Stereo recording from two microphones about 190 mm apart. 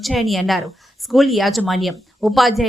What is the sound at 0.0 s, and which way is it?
Speech, centre (ahead or behind).